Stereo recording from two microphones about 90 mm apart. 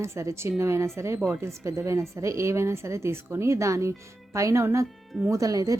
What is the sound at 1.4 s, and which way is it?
Speech, 30° right (ahead or behind).